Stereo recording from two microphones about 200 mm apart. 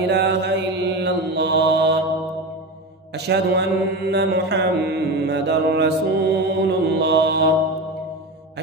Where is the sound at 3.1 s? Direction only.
55° right (ahead or behind).